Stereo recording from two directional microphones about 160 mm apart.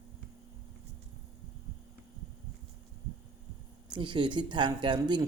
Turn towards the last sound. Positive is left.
turn(degrees=-30)  # may be behind; listen again after turning